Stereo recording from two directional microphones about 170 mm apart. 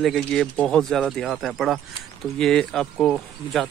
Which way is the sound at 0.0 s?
5° left (ahead or behind).